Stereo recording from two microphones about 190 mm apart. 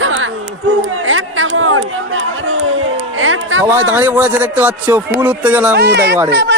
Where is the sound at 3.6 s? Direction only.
15° right (ahead or behind).